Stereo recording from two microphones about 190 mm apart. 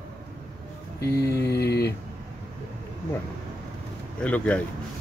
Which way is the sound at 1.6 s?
60° left (ahead or behind).